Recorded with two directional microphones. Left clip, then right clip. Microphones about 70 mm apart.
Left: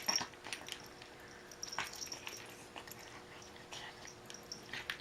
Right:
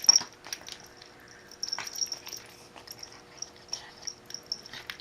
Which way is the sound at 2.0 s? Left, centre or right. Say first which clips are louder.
Right 12 dB; left.